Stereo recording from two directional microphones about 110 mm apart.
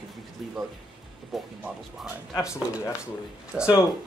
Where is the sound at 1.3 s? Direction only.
Centre (ahead or behind).